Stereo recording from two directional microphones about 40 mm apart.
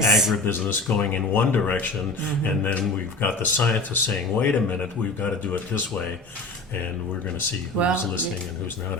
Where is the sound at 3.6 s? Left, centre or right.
Left.